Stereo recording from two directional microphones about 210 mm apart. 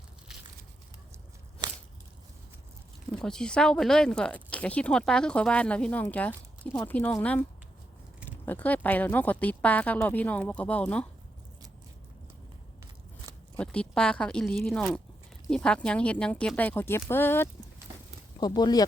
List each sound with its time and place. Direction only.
1.6 s a sound: 20° right (ahead or behind)
3.1 s speech: 5° left (ahead or behind)
8.4 s speech: 10° left (ahead or behind)
13.6 s speech: 5° left (ahead or behind)